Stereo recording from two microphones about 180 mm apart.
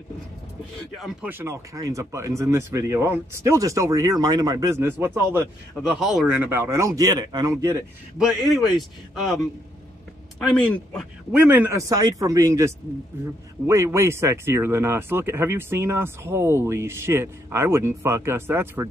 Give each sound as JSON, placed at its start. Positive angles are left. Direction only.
{"t": 0.9, "sound": "a man's voice", "side_deg": 0}
{"t": 1.3, "sound": "speech", "side_deg": -15}
{"t": 5.9, "sound": "speech", "side_deg": 0}
{"t": 8.2, "sound": "a man's voice", "side_deg": 0}
{"t": 10.4, "sound": "speech", "side_deg": 5}
{"t": 11.3, "sound": "speech", "side_deg": -10}